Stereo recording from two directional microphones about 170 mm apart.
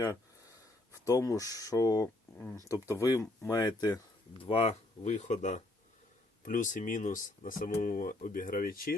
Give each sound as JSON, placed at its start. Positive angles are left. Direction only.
{"t": 1.0, "sound": "speech", "side_deg": 20}
{"t": 4.4, "sound": "speech", "side_deg": 35}